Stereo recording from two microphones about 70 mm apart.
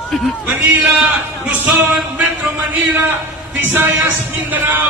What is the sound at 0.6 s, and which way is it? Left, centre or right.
Speech, right.